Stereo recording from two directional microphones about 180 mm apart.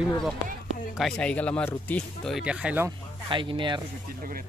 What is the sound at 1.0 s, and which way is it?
Speech, 5° left (ahead or behind).